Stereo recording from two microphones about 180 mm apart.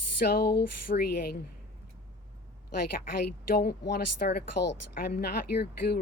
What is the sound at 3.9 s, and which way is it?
Speech, 65° left (ahead or behind).